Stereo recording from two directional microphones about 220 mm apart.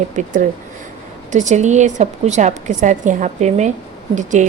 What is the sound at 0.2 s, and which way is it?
A woman's voice, 35° right (ahead or behind).